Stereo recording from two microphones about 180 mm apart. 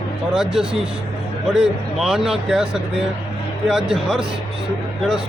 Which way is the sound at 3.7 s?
5° right (ahead or behind).